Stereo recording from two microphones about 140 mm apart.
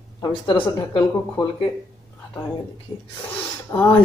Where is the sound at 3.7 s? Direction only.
15° left (ahead or behind).